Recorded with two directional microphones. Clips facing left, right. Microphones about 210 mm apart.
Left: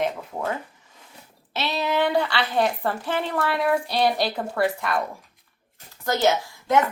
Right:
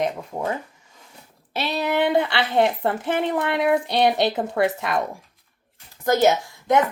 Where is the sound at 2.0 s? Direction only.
20° right (ahead or behind).